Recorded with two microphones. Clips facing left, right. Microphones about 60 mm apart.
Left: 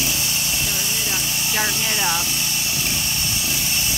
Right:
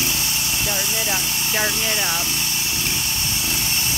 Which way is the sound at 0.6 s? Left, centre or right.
Right.